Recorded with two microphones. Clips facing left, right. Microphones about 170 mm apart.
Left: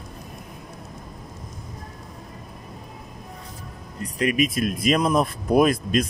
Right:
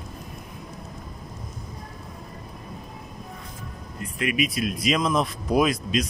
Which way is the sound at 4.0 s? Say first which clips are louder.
Left 4 dB; 35° left (ahead or behind).